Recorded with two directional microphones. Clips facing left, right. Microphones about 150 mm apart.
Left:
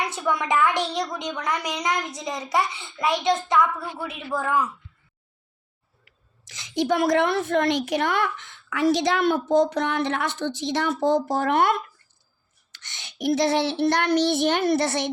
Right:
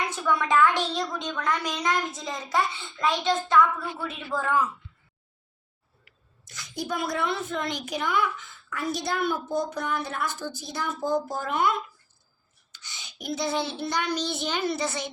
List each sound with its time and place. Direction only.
0.2 s a woman's voice: 20° left (ahead or behind)
6.5 s a woman's voice: 90° left; by 15.1 s 70° left (ahead or behind)